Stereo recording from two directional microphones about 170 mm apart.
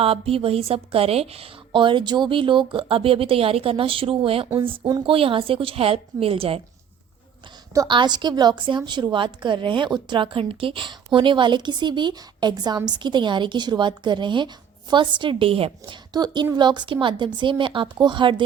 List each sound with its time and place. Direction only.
0.0 s a woman's voice: 35° right (ahead or behind)
7.7 s a woman's voice: 25° right (ahead or behind)